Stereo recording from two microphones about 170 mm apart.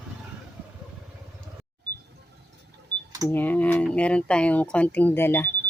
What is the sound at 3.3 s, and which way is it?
Speech, 10° left (ahead or behind).